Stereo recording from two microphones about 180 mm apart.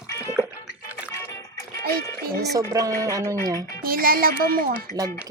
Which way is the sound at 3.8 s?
55° right (ahead or behind).